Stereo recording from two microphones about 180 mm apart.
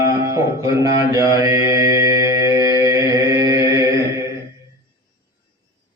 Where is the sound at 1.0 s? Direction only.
20° right (ahead or behind).